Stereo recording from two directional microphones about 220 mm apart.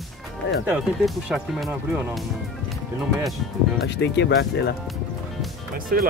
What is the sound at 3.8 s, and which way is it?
Speech, 50° left (ahead or behind).